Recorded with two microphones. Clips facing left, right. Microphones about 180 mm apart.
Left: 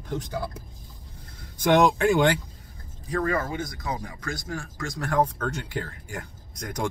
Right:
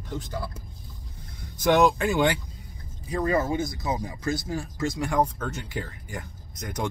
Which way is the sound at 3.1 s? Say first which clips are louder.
Right 2 dB; 20° right (ahead or behind).